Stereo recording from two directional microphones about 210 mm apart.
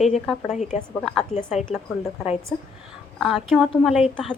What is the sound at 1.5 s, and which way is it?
Speech, centre (ahead or behind).